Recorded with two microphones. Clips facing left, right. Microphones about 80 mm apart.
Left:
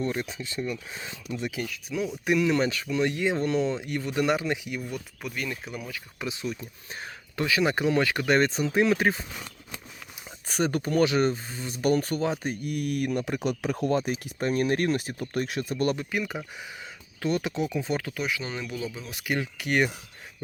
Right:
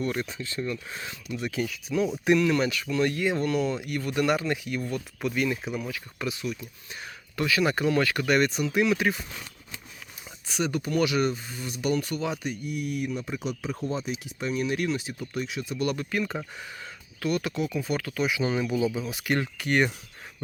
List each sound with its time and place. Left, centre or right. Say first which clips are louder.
0.0 s speech: even; centre
1.6 s speech: right 4 dB; centre
2.5 s speech: even; left
5.2 s speech: right 8 dB; centre
6.1 s speech: even; left
10.5 s speech: left 2 dB; left
11.8 s speech: left 3 dB; left
12.6 s speech: left 3 dB; left
17.2 s speech: even; left
18.3 s speech: right 6 dB; centre